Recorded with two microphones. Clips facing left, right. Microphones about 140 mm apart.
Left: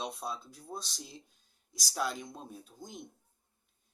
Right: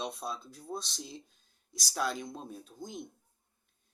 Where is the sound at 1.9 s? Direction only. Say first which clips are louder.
Right 1 dB; 5° left (ahead or behind).